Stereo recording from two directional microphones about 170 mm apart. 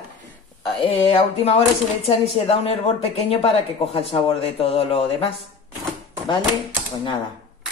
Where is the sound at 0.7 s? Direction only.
35° left (ahead or behind).